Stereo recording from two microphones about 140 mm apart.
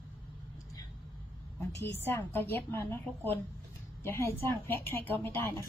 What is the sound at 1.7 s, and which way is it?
A woman's voice, 20° left (ahead or behind).